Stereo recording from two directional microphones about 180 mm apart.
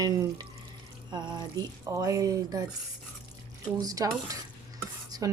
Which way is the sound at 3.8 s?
20° right (ahead or behind).